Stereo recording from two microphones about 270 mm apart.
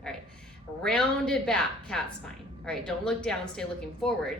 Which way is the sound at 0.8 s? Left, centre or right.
Centre.